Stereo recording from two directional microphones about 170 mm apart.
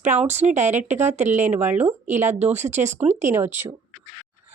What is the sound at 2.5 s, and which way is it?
Speech, 45° right (ahead or behind).